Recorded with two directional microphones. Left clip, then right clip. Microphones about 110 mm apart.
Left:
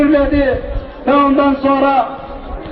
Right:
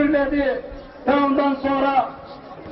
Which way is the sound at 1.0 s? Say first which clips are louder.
Left 7 dB; 30° left (ahead or behind).